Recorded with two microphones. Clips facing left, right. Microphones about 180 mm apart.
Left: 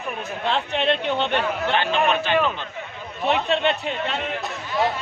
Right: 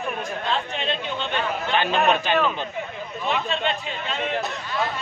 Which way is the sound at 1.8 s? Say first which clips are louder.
Right 3 dB; 15° right (ahead or behind).